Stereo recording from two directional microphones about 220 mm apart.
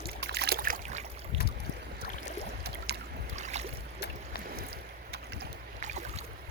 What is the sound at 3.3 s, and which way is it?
Boat, 30° right (ahead or behind).